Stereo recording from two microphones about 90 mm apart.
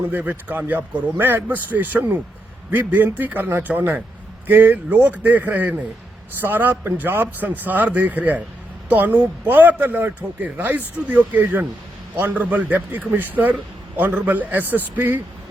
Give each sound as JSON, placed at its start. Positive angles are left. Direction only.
{"t": 0.1, "sound": "speech", "side_deg": -20}